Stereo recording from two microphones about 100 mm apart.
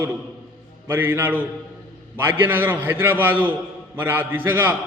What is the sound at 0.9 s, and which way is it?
A man's voice, 20° right (ahead or behind).